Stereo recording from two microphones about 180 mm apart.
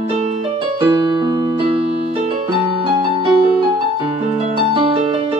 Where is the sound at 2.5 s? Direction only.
30° right (ahead or behind).